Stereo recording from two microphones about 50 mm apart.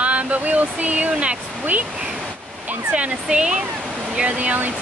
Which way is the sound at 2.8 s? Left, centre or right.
Right.